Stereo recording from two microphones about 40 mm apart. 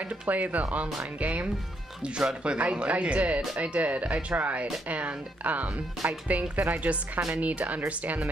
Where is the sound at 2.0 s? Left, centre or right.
Right.